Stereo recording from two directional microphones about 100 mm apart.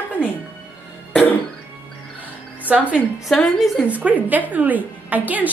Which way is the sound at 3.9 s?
15° right (ahead or behind).